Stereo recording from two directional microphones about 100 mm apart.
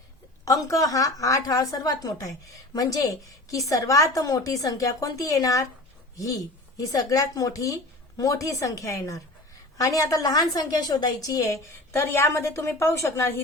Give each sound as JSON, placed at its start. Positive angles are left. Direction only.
{"t": 0.4, "sound": "a woman's voice", "side_deg": 35}